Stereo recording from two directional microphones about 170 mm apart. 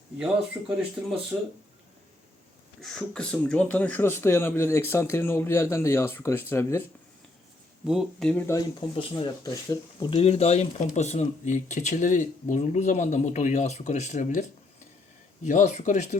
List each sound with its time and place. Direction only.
0.6 s speech: 15° right (ahead or behind)
2.8 s speech: 5° left (ahead or behind)
7.9 s speech: centre (ahead or behind)
9.0 s speech: 30° left (ahead or behind); by 14.4 s 45° left (ahead or behind)
15.4 s speech: 45° left (ahead or behind)